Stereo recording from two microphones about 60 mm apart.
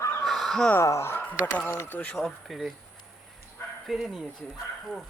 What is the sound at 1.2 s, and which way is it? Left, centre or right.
Speech, left.